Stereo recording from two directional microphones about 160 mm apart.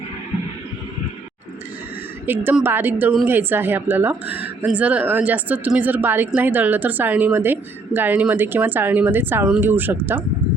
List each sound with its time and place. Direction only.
2.2 s speech: 10° right (ahead or behind)